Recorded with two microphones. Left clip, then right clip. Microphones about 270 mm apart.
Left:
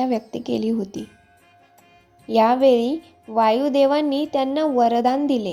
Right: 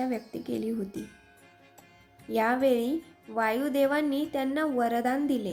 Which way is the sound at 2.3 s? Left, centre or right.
Centre.